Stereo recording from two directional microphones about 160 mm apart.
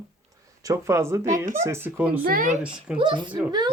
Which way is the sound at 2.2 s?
60° right (ahead or behind).